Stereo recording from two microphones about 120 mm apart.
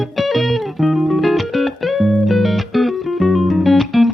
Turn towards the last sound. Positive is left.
turn(degrees=0)  # may be behind; listen again after turning